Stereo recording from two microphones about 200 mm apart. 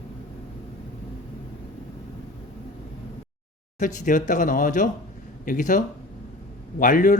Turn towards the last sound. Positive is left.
turn(degrees=40)  # may be behind; listen again after turning